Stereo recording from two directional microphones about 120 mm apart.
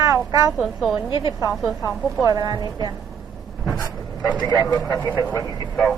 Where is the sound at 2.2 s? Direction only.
30° right (ahead or behind).